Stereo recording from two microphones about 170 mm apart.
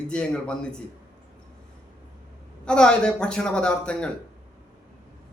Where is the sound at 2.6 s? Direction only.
5° left (ahead or behind).